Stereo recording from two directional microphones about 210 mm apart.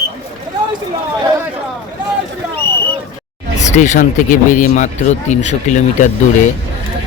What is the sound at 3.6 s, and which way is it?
Speech, 35° left (ahead or behind).